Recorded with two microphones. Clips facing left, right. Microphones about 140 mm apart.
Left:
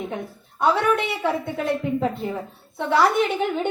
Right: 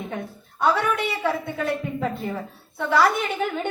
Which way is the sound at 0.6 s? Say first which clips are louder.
Left 2 dB; 20° left (ahead or behind).